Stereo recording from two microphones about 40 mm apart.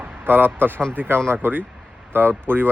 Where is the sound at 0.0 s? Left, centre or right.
Right.